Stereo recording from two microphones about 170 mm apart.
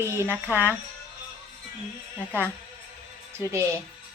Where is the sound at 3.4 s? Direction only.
15° right (ahead or behind).